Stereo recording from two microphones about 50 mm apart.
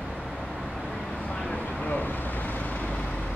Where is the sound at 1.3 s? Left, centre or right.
Left.